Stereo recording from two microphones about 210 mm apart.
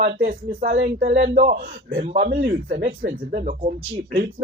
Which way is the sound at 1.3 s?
40° right (ahead or behind).